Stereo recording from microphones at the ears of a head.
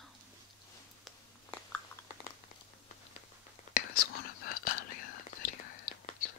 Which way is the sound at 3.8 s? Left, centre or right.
Left.